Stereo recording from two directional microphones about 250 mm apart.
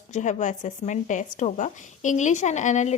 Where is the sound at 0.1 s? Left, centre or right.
Left.